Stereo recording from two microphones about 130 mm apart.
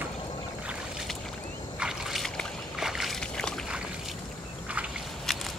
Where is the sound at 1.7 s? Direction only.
5° right (ahead or behind).